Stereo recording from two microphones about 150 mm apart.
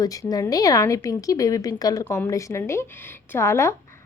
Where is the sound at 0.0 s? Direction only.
25° left (ahead or behind).